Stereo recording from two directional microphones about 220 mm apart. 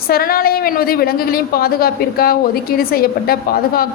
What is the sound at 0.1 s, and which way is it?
A woman's voice, 40° left (ahead or behind).